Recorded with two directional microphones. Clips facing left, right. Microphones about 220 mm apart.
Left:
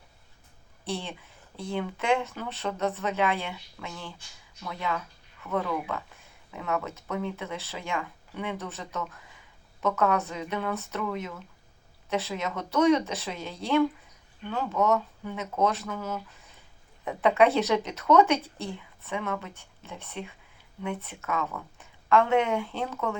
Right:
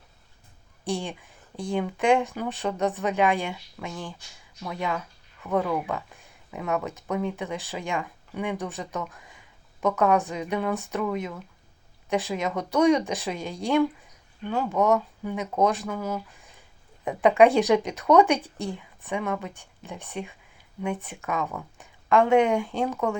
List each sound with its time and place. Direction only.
0.9 s speech: 15° right (ahead or behind)
6.5 s speech: 15° right (ahead or behind)
12.0 s speech: 15° right (ahead or behind)